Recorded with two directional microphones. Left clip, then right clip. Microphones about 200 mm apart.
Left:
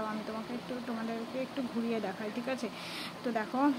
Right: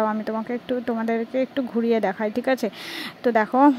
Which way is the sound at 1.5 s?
40° right (ahead or behind).